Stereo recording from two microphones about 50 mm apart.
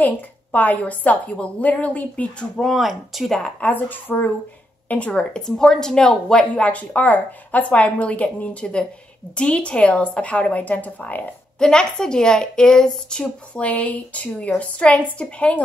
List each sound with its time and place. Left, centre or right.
0.0 s a woman's voice: left
2.6 s speech: centre
3.3 s speech: centre
3.6 s a woman's voice: left
11.6 s speech: centre
13.6 s a woman's voice: left